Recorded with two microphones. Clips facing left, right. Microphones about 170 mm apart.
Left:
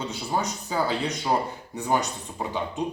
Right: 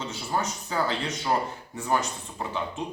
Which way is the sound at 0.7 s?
10° left (ahead or behind).